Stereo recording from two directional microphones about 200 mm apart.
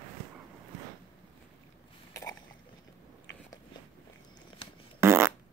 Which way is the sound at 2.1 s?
15° left (ahead or behind).